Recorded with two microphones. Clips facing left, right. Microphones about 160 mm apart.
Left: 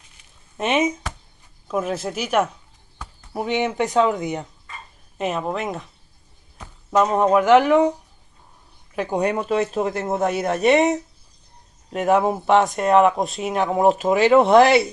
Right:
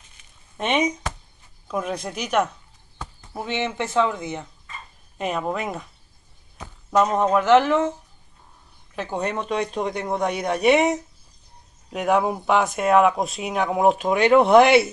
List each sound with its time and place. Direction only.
0.6 s speech: 5° left (ahead or behind)
5.1 s speech: centre (ahead or behind)
7.0 s speech: 5° left (ahead or behind)